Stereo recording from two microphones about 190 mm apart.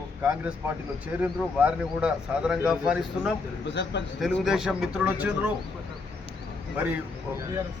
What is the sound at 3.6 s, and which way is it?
Speech, 70° left (ahead or behind).